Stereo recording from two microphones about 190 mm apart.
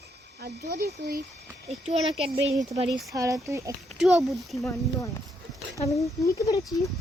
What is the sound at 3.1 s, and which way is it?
Speech, 15° right (ahead or behind).